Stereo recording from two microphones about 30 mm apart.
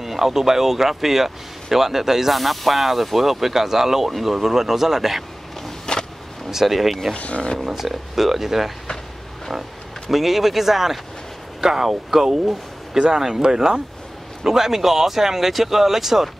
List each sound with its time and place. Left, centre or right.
0.0 s speech: centre
2.3 s speech: centre
5.9 s vehicle: left
6.5 s speech: centre
7.2 s speech: left
7.6 s speech: centre
10.1 s speech: centre